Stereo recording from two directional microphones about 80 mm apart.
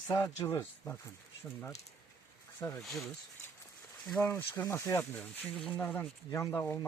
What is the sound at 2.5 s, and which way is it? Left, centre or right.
Speech, left.